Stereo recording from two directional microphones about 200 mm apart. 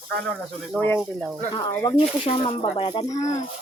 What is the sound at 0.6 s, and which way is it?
Speech, 5° left (ahead or behind).